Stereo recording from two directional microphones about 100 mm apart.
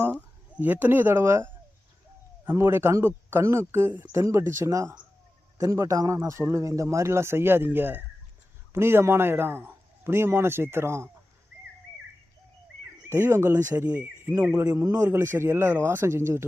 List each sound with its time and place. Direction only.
0.1 s a sound: 15° left (ahead or behind)
0.6 s a man's voice: 20° right (ahead or behind)
2.6 s a man's voice: 25° right (ahead or behind)
4.1 s a man's voice: 30° right (ahead or behind)
12.8 s speech: 25° right (ahead or behind)
14.7 s a man's voice: 35° right (ahead or behind)